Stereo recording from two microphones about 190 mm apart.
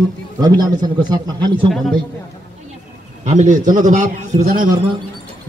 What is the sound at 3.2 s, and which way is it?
A man's voice, 40° right (ahead or behind).